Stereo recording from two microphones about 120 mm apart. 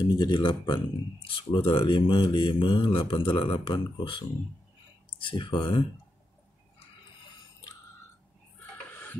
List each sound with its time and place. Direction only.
0.0 s speech: 40° left (ahead or behind)
5.2 s speech: 45° left (ahead or behind)